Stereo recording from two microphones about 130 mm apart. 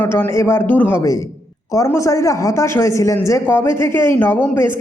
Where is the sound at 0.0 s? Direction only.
15° left (ahead or behind).